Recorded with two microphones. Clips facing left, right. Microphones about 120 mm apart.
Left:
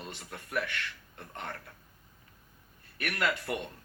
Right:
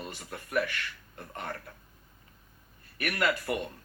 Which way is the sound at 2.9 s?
10° right (ahead or behind).